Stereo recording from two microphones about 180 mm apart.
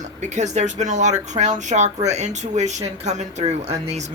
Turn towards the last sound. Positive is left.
turn(degrees=-35)  # may be behind; listen again after turning